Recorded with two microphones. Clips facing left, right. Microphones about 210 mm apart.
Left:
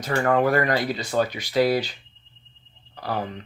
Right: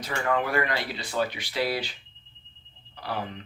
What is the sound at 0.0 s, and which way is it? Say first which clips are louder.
Speech: left 7 dB; 45° left (ahead or behind).